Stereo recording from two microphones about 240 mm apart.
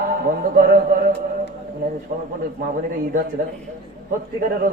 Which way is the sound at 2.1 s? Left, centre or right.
Right.